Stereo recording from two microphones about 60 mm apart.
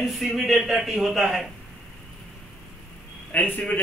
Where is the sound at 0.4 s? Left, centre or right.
Centre.